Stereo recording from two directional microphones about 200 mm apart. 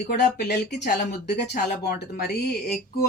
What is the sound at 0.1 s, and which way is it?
Speech, 55° left (ahead or behind).